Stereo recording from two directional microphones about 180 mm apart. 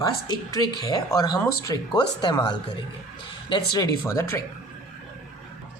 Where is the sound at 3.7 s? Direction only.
20° left (ahead or behind).